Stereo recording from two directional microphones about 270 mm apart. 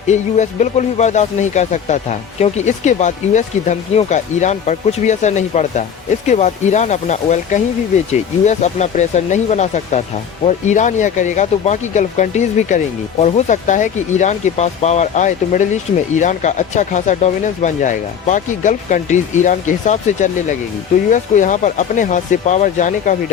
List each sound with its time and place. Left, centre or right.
0.1 s speech: left